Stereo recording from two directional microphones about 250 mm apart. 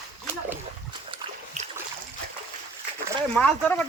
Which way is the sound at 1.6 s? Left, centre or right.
Right.